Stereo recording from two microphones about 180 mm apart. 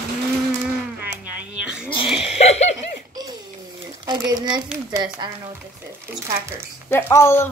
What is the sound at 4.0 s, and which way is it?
Speech, 25° right (ahead or behind).